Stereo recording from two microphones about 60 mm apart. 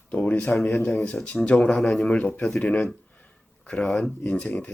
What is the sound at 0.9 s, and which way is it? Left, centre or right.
Speech, centre.